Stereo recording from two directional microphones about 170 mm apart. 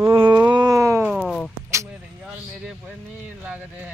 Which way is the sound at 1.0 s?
Centre (ahead or behind).